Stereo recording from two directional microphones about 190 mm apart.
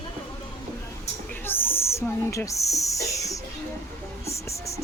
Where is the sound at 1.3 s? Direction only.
10° left (ahead or behind).